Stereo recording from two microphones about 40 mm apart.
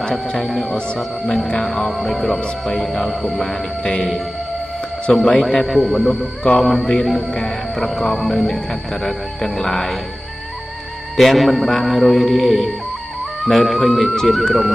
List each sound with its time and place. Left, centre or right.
0.0 s speech: left
0.4 s mantra: centre
1.9 s mantra: centre
3.3 s music: centre
5.1 s music: centre
5.8 s mantra: centre
7.3 s music: centre
11.1 s mantra: centre
13.4 s speech: centre
14.1 s mantra: centre